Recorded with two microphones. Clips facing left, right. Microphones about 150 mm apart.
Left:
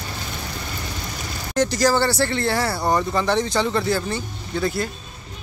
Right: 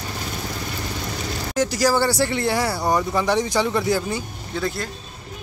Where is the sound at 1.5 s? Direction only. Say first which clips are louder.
Left 1 dB; 5° right (ahead or behind).